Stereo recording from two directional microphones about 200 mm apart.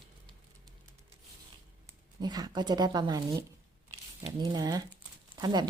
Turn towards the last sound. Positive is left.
turn(degrees=-20)  # may be behind; listen again after turning